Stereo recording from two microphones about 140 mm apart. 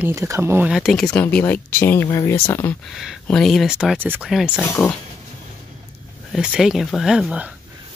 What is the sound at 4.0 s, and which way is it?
Speech, 15° right (ahead or behind).